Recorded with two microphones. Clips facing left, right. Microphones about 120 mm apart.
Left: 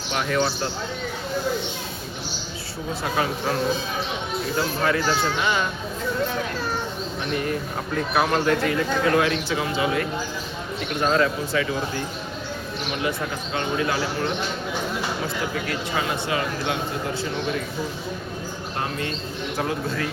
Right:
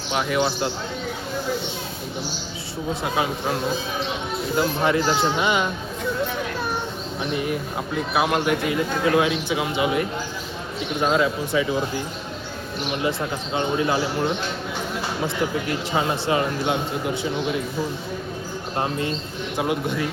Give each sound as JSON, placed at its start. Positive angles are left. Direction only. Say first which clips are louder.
{"t": 0.1, "sound": "speech", "louder": "right 1 dB", "side_deg": -10}
{"t": 3.0, "sound": "speech", "louder": "left 1 dB", "side_deg": -15}
{"t": 4.5, "sound": "speech", "louder": "right 3 dB", "side_deg": -20}
{"t": 7.3, "sound": "speech", "louder": "even", "side_deg": -10}
{"t": 13.0, "sound": "speech", "louder": "right 2 dB", "side_deg": -25}
{"t": 15.6, "sound": "speech", "louder": "right 3 dB", "side_deg": -25}
{"t": 18.8, "sound": "speech", "louder": "right 4 dB", "side_deg": -25}